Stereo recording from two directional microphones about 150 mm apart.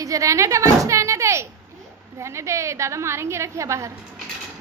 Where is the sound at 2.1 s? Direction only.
20° right (ahead or behind).